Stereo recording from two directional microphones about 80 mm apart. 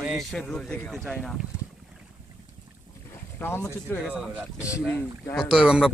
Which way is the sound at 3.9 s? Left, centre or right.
Left.